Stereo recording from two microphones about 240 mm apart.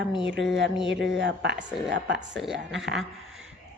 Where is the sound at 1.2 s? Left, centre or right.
Right.